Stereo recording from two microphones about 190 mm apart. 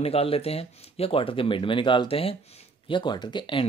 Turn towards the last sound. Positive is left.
turn(degrees=25)  # may be behind; listen again after turning